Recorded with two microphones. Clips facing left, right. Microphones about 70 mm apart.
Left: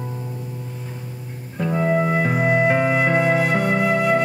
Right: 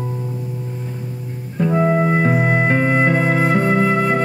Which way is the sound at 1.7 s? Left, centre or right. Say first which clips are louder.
Right 3 dB; centre.